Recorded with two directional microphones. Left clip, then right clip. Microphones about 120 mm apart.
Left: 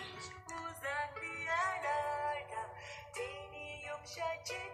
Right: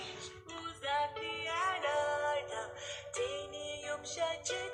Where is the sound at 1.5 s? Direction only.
35° right (ahead or behind).